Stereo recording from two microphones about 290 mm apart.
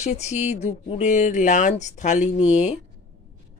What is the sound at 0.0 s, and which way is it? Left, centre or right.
Speech, left.